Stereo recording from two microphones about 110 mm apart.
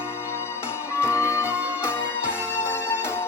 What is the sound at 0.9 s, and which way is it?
Music, 25° left (ahead or behind).